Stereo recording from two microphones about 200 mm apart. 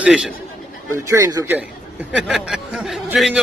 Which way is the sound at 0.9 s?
15° right (ahead or behind).